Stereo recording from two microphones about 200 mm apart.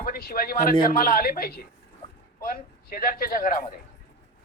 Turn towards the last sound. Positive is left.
turn(degrees=45)  # may be behind; listen again after turning